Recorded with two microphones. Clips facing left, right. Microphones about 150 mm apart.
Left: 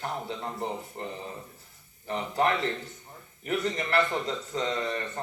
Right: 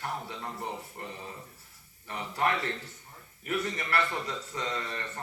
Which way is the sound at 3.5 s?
25° left (ahead or behind).